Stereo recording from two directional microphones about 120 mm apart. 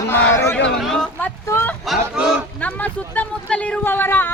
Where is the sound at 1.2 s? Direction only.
20° left (ahead or behind).